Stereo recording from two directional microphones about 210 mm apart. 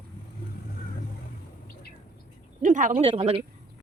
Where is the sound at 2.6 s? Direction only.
35° right (ahead or behind).